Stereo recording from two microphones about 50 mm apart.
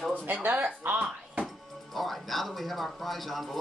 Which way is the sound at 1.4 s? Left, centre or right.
Centre.